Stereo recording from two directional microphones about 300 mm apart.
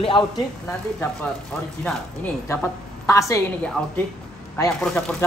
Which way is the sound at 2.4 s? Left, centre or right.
Centre.